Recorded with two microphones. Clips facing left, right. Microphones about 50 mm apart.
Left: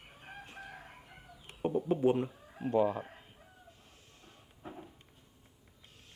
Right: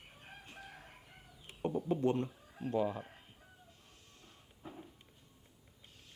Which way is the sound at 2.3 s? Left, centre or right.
Centre.